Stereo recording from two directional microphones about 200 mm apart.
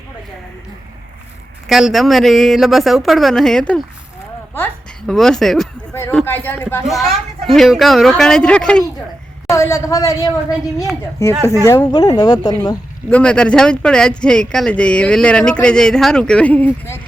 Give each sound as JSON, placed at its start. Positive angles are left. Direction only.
{"t": 1.6, "sound": "speech", "side_deg": 0}
{"t": 5.9, "sound": "a woman's voice", "side_deg": 15}
{"t": 13.1, "sound": "speech", "side_deg": 5}